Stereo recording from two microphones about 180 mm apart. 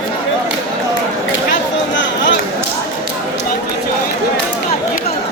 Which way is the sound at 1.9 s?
90° left.